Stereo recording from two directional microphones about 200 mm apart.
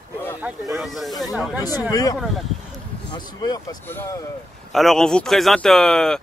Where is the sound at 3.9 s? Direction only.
10° left (ahead or behind).